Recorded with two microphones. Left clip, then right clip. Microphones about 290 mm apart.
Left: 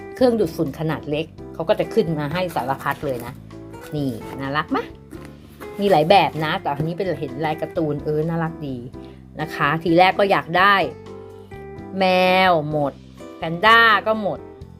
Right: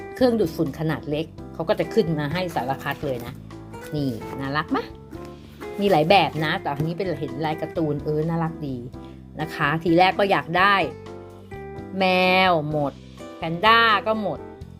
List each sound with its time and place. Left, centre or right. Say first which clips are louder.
0.0 s speech: left 3 dB; centre